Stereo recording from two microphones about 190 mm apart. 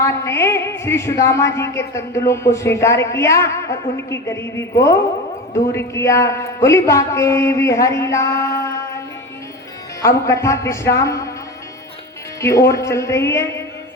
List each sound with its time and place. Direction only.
0.0 s a man's voice: 15° left (ahead or behind)
10.0 s a man's voice: 15° left (ahead or behind)
12.4 s a man's voice: 15° left (ahead or behind)